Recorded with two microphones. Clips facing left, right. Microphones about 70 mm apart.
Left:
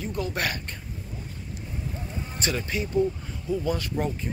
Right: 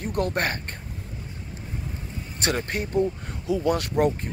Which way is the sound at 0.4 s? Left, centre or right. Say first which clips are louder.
Right 3 dB; right.